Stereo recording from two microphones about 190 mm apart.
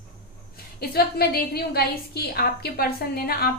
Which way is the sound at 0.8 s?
55° left (ahead or behind).